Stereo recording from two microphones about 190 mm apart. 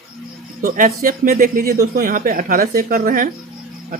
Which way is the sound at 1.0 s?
45° right (ahead or behind).